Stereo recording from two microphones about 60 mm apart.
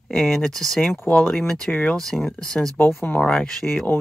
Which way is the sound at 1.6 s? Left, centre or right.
Left.